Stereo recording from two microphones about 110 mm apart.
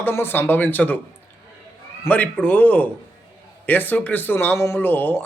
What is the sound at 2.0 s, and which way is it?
A man's voice, 15° left (ahead or behind).